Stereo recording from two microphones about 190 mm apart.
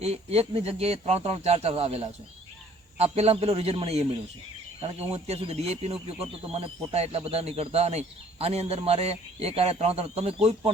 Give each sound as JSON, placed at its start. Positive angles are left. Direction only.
{"t": 0.0, "sound": "speech", "side_deg": -35}